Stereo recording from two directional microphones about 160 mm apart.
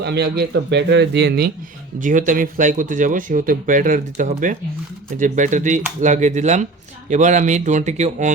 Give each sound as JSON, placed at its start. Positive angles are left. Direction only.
{"t": 0.0, "sound": "speech", "side_deg": -90}
{"t": 2.0, "sound": "speech", "side_deg": -55}